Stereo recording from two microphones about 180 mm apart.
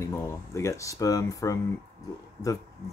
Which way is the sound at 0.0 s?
15° left (ahead or behind).